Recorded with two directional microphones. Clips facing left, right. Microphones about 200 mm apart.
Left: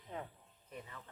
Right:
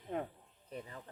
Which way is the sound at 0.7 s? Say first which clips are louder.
Right 4 dB; 35° right (ahead or behind).